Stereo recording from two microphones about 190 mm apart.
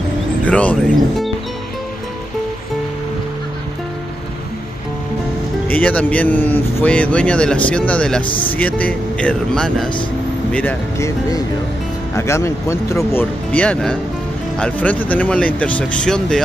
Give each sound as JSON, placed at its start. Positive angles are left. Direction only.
{"t": 0.5, "sound": "speech", "side_deg": 5}
{"t": 5.7, "sound": "speech", "side_deg": 10}
{"t": 8.3, "sound": "speech", "side_deg": 25}
{"t": 8.5, "sound": "speech", "side_deg": 10}